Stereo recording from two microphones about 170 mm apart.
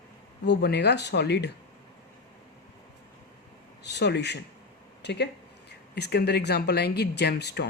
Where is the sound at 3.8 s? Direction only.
85° left.